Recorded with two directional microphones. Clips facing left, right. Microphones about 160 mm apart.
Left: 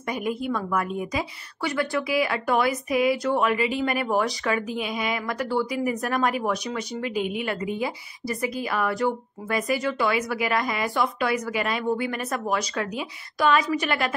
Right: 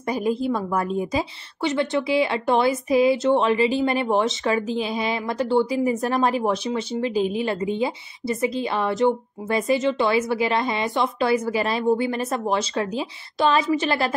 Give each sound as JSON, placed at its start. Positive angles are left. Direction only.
{"t": 0.1, "sound": "a woman's voice", "side_deg": -30}